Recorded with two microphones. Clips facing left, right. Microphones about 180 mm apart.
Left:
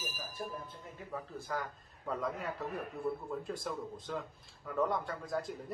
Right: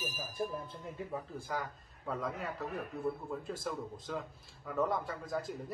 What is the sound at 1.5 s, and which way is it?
A man's voice, centre (ahead or behind).